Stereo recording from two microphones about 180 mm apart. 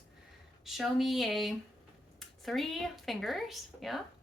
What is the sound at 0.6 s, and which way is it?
A woman's voice, centre (ahead or behind).